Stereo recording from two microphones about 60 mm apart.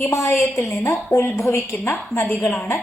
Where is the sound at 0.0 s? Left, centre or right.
Left.